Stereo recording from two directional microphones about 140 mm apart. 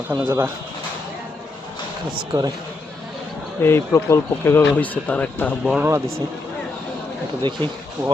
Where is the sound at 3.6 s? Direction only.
15° left (ahead or behind).